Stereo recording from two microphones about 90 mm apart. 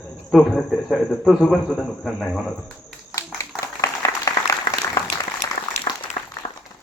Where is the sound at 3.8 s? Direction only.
35° left (ahead or behind).